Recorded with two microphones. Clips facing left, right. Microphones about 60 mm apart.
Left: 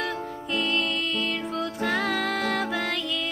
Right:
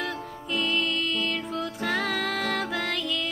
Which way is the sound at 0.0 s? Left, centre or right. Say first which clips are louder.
Left 2 dB; centre.